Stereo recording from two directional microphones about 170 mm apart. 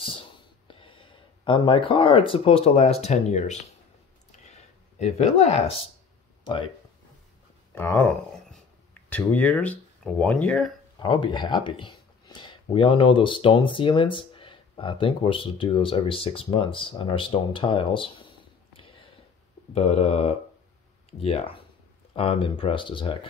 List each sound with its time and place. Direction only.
0.0 s speech: 30° left (ahead or behind)
4.3 s a sound: 40° left (ahead or behind)
6.4 s speech: 30° left (ahead or behind)
7.7 s speech: 15° left (ahead or behind)
11.0 s speech: 25° left (ahead or behind)